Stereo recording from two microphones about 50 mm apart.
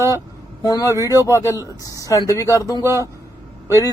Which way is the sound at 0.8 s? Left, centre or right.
Left.